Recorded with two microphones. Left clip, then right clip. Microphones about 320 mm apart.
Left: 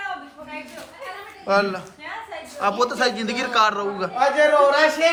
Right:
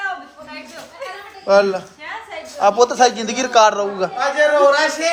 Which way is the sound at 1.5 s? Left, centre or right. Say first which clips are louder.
Right 7 dB; centre.